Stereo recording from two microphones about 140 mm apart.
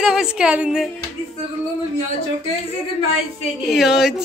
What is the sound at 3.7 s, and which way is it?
Speech, 5° right (ahead or behind).